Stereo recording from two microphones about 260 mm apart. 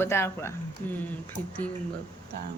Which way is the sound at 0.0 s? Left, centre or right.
Centre.